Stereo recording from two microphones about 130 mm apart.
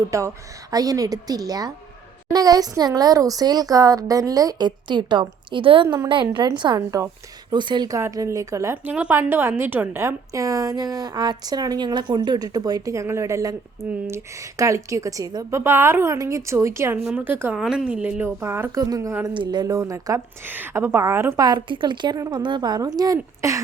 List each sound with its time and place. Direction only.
0.1 s a woman's voice: 25° right (ahead or behind)
7.9 s a woman's voice: 25° right (ahead or behind)
8.7 s a woman's voice: 15° right (ahead or behind)
21.4 s a woman's voice: 35° right (ahead or behind)